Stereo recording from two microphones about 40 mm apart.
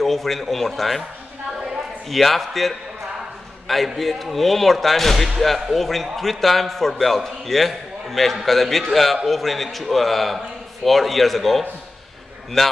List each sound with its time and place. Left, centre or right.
0.0 s a man's voice: centre
2.0 s a man's voice: centre